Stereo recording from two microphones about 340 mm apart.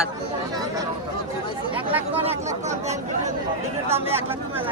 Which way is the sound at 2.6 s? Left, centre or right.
Centre.